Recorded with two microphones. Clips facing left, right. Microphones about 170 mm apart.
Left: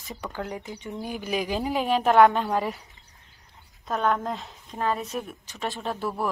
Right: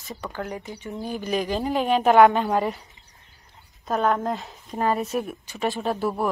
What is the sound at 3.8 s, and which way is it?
Speech, centre (ahead or behind).